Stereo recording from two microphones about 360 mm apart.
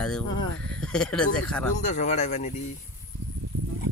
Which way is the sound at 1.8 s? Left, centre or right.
Centre.